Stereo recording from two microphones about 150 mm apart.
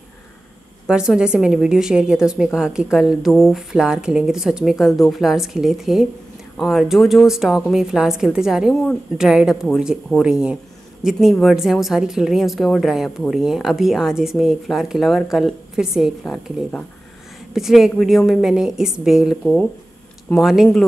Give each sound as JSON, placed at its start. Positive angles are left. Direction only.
{"t": 0.8, "sound": "speech", "side_deg": -5}